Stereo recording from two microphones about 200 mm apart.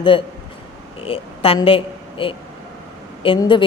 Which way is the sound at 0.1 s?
25° left (ahead or behind).